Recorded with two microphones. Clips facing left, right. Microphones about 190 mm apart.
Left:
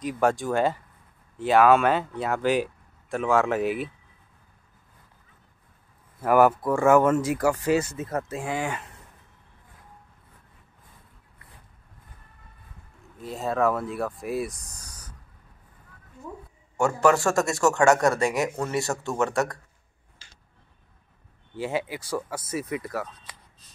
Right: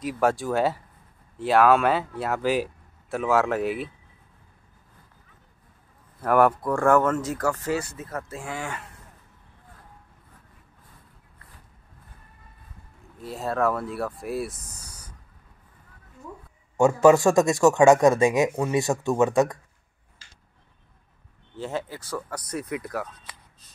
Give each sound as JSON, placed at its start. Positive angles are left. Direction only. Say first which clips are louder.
{"t": 0.0, "sound": "speech", "louder": "even", "side_deg": 0}
{"t": 6.2, "sound": "speech", "louder": "left 1 dB", "side_deg": 5}
{"t": 13.2, "sound": "speech", "louder": "left 1 dB", "side_deg": 0}
{"t": 16.7, "sound": "speech", "louder": "right 5 dB", "side_deg": -20}
{"t": 21.5, "sound": "speech", "louder": "left 2 dB", "side_deg": 10}